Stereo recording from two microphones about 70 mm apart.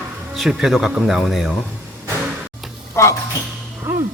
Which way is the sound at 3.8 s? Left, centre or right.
Right.